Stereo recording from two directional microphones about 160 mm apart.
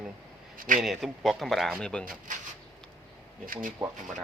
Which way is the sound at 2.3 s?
55° right (ahead or behind).